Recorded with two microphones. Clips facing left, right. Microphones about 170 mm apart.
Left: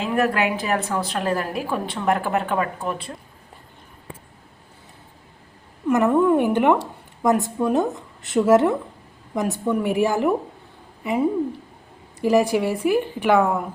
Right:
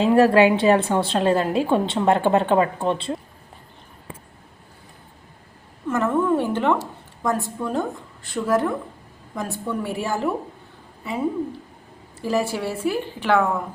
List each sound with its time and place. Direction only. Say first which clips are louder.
0.0 s a woman's voice: right 6 dB; 30° right (ahead or behind)
5.9 s a woman's voice: left 4 dB; 15° left (ahead or behind)
12.2 s a woman's voice: left 5 dB; 15° left (ahead or behind)